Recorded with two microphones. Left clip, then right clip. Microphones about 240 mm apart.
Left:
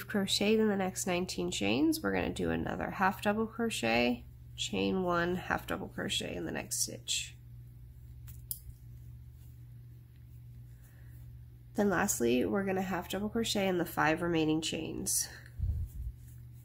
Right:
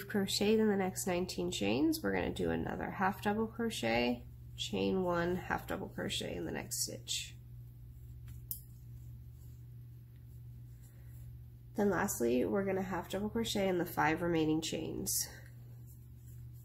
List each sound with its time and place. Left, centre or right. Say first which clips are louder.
0.0 s speech: left 2 dB; centre
11.7 s speech: left 3 dB; centre